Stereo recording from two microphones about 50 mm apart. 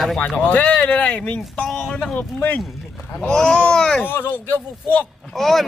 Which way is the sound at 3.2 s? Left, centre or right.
Centre.